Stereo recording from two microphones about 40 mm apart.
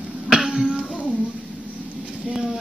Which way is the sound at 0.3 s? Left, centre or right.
Centre.